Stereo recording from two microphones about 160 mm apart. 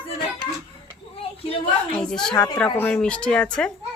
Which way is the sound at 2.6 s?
5° left (ahead or behind).